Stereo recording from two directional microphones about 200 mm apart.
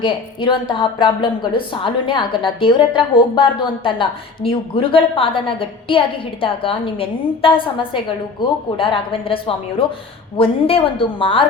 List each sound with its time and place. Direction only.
0.0 s a woman's voice: 25° left (ahead or behind)